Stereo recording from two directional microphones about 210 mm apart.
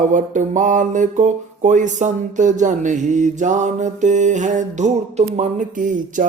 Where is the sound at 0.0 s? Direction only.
35° right (ahead or behind).